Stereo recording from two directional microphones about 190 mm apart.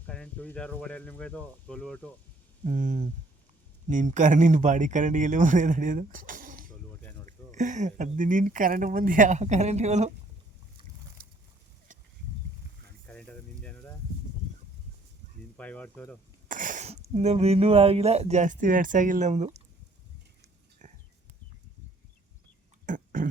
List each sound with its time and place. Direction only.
0.0 s speech: 5° left (ahead or behind)
2.6 s speech: 45° right (ahead or behind)
13.1 s a sound: 5° left (ahead or behind)
15.5 s speech: 5° left (ahead or behind)
16.5 s speech: 45° right (ahead or behind)
20.8 s a sound: 40° right (ahead or behind)
22.9 s burping: 45° right (ahead or behind)